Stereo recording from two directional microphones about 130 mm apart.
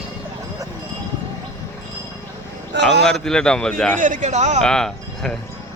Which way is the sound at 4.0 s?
80° right.